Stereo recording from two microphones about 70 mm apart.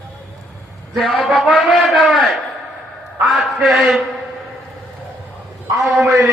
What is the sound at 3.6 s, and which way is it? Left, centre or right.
Speech, centre.